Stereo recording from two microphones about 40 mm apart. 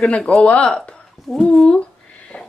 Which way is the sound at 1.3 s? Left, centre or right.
Centre.